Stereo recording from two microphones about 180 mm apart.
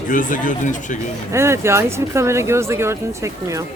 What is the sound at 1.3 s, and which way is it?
Speech, 15° right (ahead or behind).